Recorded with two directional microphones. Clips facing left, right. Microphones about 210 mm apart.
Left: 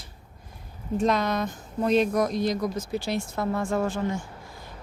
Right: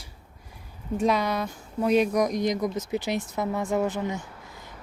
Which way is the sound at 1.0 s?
10° right (ahead or behind).